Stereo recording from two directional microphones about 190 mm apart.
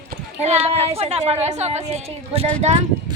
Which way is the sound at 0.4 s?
35° right (ahead or behind).